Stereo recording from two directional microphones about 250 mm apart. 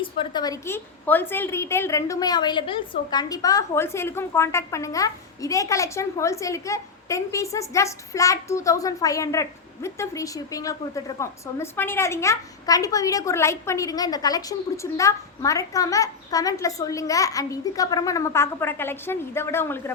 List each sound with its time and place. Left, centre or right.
0.0 s a woman's voice: centre